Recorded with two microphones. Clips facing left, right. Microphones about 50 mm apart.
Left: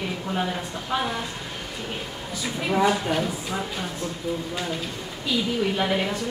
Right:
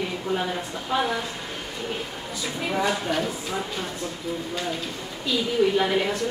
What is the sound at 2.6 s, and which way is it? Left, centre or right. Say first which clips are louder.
A woman's voice: left 3 dB; centre.